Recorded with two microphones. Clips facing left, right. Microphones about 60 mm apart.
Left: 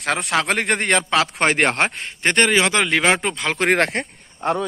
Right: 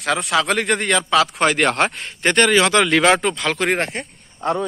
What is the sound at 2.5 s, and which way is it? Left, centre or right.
Speech, centre.